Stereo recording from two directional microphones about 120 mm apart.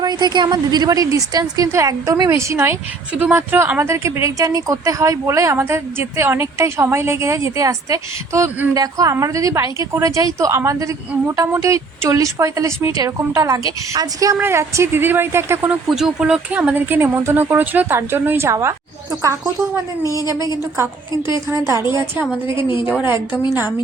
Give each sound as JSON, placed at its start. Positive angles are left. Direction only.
{"t": 0.0, "sound": "a woman's voice", "side_deg": -35}
{"t": 15.9, "sound": "speech", "side_deg": -5}